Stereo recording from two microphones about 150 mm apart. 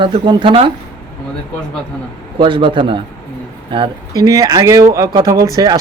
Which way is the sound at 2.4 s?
30° right (ahead or behind).